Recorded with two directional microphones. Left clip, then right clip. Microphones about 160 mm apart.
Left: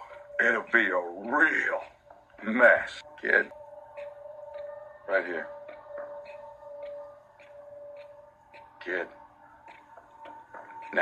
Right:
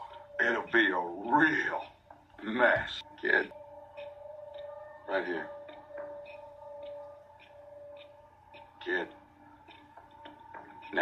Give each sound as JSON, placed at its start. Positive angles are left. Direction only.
{"t": 0.1, "sound": "a man's voice", "side_deg": 45}
{"t": 5.0, "sound": "a man's voice", "side_deg": 45}
{"t": 8.8, "sound": "speech", "side_deg": 45}